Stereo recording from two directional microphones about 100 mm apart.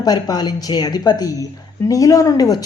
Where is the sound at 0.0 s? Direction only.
40° left (ahead or behind).